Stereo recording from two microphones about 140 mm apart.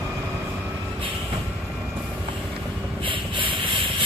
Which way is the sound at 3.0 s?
40° right (ahead or behind).